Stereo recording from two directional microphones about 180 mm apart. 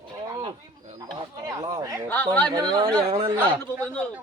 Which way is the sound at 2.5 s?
25° right (ahead or behind).